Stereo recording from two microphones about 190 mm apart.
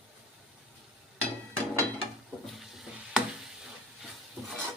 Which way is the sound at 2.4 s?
Centre (ahead or behind).